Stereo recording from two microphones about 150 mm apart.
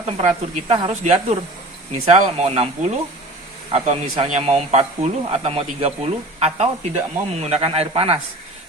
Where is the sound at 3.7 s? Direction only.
55° right (ahead or behind).